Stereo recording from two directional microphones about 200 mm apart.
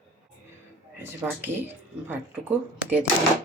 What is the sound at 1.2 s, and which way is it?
Speech, 10° right (ahead or behind).